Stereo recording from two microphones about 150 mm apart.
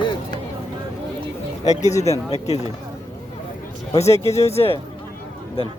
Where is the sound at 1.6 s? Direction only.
50° left (ahead or behind).